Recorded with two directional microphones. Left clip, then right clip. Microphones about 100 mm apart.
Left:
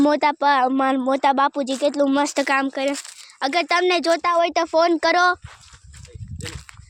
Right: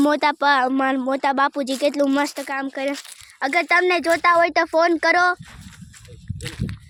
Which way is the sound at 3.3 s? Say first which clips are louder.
Even; 15° left (ahead or behind).